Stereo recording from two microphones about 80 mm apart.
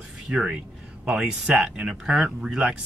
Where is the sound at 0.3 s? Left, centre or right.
Centre.